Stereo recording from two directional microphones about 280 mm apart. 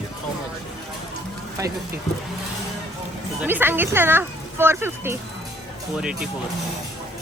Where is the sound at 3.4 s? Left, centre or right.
Centre.